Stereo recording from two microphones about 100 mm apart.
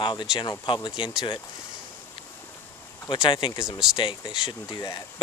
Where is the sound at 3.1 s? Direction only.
55° left (ahead or behind).